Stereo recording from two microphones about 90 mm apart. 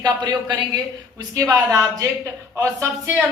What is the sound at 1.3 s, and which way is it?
A woman's voice, 40° right (ahead or behind).